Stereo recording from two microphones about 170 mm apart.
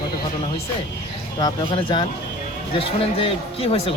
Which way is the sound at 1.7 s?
30° left (ahead or behind).